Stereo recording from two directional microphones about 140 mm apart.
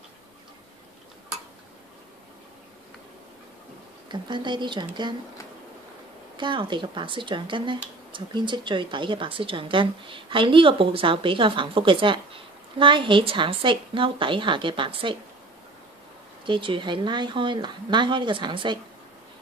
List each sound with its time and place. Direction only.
4.1 s speech: 35° right (ahead or behind)
6.3 s speech: 35° right (ahead or behind)
16.4 s speech: 35° right (ahead or behind)